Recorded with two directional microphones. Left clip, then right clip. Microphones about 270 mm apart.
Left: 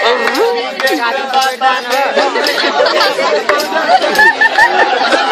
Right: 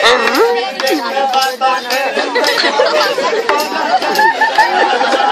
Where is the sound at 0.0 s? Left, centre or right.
Centre.